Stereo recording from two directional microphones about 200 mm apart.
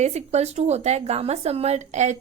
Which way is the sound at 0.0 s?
35° right (ahead or behind).